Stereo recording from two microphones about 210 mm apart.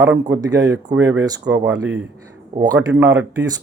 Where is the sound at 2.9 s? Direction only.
15° right (ahead or behind).